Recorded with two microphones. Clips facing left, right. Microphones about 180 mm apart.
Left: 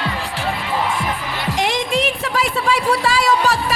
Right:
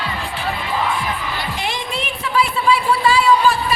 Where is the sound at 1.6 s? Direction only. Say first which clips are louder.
Left 6 dB; 90° left.